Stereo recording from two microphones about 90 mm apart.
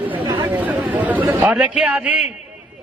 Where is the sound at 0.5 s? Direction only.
15° right (ahead or behind).